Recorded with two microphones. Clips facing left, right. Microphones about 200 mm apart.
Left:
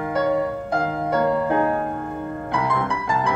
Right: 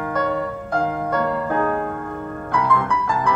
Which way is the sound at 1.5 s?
25° left (ahead or behind).